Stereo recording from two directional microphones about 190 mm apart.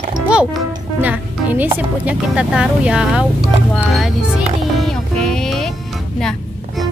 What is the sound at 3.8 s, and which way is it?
Music, centre (ahead or behind).